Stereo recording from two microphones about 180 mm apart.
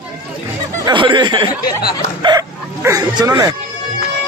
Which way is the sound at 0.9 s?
25° right (ahead or behind).